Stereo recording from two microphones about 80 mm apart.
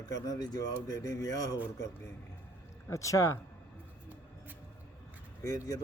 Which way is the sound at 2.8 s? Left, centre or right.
Left.